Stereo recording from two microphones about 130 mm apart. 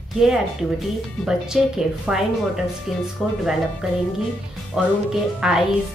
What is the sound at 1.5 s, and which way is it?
Speech, centre (ahead or behind).